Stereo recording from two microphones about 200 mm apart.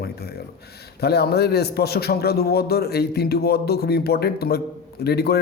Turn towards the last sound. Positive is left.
turn(degrees=55)  # may be behind; listen again after turning